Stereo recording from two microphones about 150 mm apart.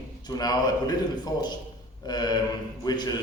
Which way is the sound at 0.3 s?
25° left (ahead or behind).